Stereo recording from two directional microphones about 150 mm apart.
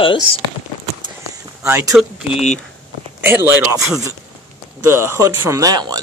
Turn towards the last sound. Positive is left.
turn(degrees=-25)  # may be behind; listen again after turning